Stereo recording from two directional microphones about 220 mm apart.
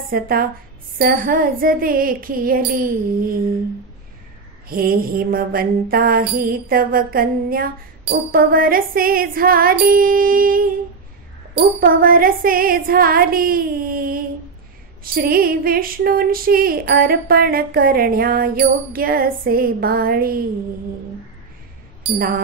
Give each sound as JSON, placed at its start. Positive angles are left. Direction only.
{"t": 0.1, "sound": "mantra", "side_deg": -40}
{"t": 4.6, "sound": "mantra", "side_deg": -40}